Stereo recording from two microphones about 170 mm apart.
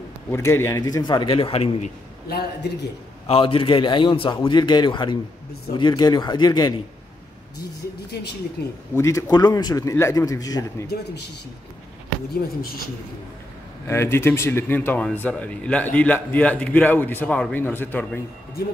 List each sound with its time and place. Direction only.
0.3 s a man's voice: 15° left (ahead or behind); by 1.9 s 35° left (ahead or behind)
2.2 s a man's voice: 70° left (ahead or behind)
3.3 s a man's voice: 30° left (ahead or behind)
8.1 s a man's voice: 70° left (ahead or behind)
8.9 s a man's voice: 20° left (ahead or behind)
13.8 s speech: 15° left (ahead or behind)